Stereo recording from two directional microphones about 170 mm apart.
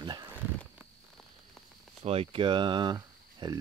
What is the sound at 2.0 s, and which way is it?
Speech, 35° right (ahead or behind).